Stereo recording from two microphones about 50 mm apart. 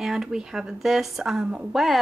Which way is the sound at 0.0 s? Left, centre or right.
Centre.